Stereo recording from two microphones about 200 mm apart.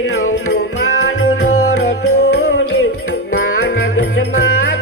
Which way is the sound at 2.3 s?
65° left (ahead or behind).